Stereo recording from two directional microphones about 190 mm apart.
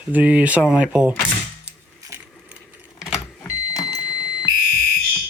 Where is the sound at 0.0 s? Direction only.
5° right (ahead or behind).